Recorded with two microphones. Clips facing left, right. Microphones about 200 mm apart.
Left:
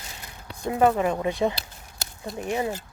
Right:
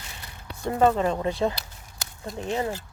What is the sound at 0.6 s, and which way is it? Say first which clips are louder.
Speech: even; 10° left (ahead or behind).